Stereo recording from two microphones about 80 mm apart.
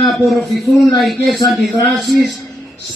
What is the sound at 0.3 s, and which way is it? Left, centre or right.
A man's voice, centre.